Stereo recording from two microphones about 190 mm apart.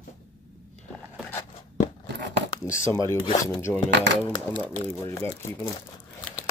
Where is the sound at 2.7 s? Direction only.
15° left (ahead or behind).